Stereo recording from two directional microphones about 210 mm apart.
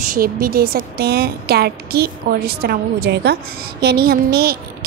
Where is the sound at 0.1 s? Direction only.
45° right (ahead or behind).